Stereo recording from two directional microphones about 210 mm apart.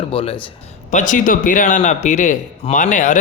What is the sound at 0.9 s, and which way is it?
A man's voice, 40° left (ahead or behind).